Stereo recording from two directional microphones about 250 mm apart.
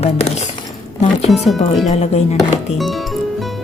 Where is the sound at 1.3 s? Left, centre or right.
Centre.